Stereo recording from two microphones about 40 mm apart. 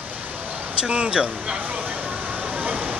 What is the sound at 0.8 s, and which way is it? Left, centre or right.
Speech, right.